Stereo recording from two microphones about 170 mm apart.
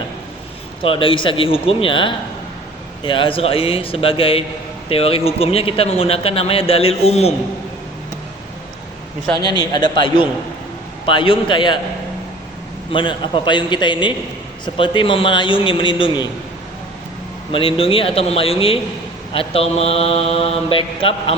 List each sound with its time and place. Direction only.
0.8 s speech: 30° left (ahead or behind)
11.0 s a man's voice: 30° left (ahead or behind)
12.9 s a man's voice: 30° left (ahead or behind)
17.5 s speech: 30° left (ahead or behind)